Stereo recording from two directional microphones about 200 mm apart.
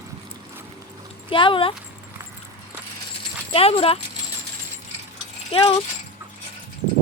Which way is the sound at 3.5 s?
30° left (ahead or behind).